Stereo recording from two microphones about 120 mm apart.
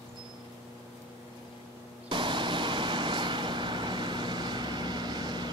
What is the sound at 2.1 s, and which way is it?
Vehicle, 40° right (ahead or behind).